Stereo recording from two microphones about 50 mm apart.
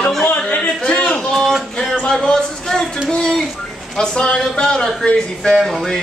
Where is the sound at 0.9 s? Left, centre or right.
Left.